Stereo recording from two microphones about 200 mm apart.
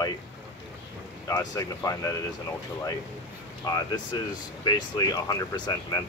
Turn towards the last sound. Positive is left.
turn(degrees=20)  # may be behind; listen again after turning